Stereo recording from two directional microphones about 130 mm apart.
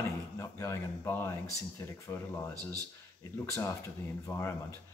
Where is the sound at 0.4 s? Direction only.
20° left (ahead or behind).